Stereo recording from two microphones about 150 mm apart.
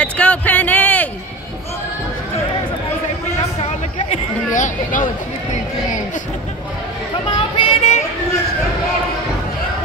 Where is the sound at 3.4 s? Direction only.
45° left (ahead or behind).